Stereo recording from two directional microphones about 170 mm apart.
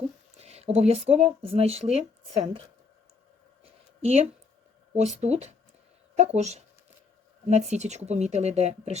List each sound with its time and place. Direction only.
0.4 s speech: 40° right (ahead or behind)
3.6 s a sound: 40° right (ahead or behind)
4.9 s speech: 40° right (ahead or behind)